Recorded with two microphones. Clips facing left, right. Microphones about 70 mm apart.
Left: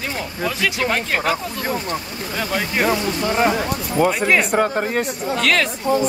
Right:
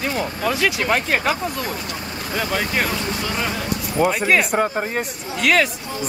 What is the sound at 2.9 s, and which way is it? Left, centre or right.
Speech, left.